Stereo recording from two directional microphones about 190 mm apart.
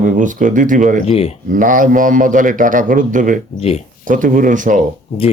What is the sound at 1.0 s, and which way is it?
Speech, 30° left (ahead or behind).